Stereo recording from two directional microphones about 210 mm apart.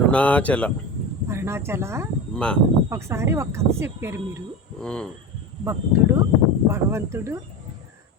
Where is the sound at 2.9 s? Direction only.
15° right (ahead or behind).